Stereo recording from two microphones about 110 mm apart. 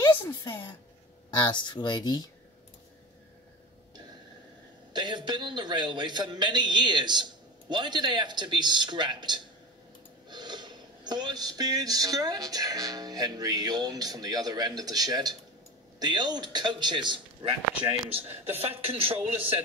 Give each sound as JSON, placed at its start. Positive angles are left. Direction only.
{"t": 0.3, "sound": "speech", "side_deg": 45}
{"t": 4.9, "sound": "a man's voice", "side_deg": -45}
{"t": 10.3, "sound": "a sound", "side_deg": -40}
{"t": 18.2, "sound": "speech", "side_deg": -20}
{"t": 18.6, "sound": "speech", "side_deg": -60}